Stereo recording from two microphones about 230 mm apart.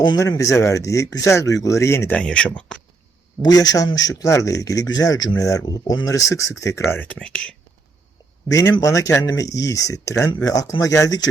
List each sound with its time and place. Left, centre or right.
0.1 s speech: centre
3.4 s speech: centre
8.4 s speech: centre